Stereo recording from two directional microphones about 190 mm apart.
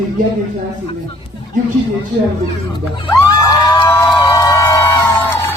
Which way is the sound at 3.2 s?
20° left (ahead or behind).